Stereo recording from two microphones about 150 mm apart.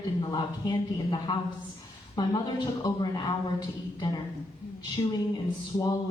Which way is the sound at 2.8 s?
25° left (ahead or behind).